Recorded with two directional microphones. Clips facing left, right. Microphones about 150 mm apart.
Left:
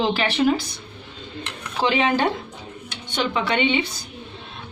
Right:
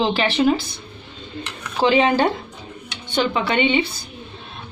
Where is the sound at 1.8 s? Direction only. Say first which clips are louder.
Right 4 dB; 35° right (ahead or behind).